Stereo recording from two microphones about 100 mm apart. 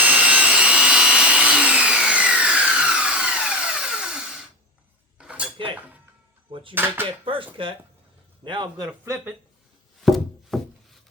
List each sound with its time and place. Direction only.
0.0 s wood: 15° right (ahead or behind)
5.1 s cutlery: 10° right (ahead or behind)
6.5 s a sound: 60° right (ahead or behind)
6.7 s speech: 20° right (ahead or behind)
7.6 s a man's voice: 60° right (ahead or behind)
10.0 s a sound: centre (ahead or behind)